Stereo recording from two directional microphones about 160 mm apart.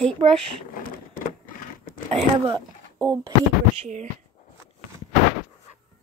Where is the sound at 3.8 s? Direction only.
45° right (ahead or behind).